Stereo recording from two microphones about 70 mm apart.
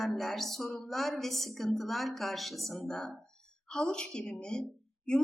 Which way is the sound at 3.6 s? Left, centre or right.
Centre.